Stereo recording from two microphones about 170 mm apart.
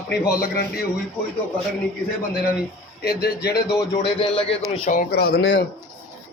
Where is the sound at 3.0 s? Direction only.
70° left (ahead or behind).